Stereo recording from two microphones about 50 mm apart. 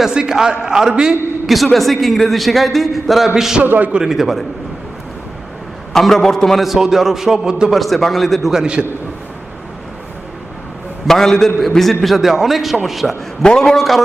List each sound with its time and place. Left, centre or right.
0.0 s a man's voice: centre
1.5 s a man's voice: centre
3.6 s a man's voice: right
4.0 s a man's voice: centre
5.9 s a man's voice: centre
6.7 s a man's voice: centre
7.7 s a man's voice: centre
8.4 s a man's voice: centre
11.0 s a man's voice: centre
13.4 s a man's voice: centre